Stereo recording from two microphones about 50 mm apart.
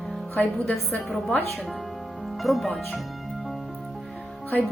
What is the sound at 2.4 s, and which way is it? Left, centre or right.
Speech, centre.